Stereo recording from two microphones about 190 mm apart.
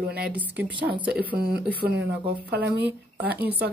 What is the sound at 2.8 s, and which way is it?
Speech, 10° right (ahead or behind).